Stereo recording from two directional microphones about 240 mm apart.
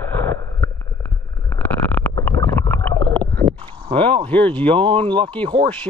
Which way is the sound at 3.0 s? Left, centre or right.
Centre.